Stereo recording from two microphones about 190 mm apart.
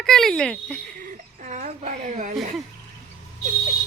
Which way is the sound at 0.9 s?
40° right (ahead or behind).